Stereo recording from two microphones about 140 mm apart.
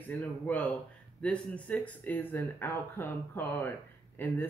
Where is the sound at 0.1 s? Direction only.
10° left (ahead or behind).